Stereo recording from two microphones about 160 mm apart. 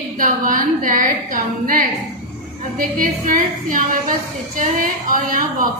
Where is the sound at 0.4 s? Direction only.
60° right (ahead or behind).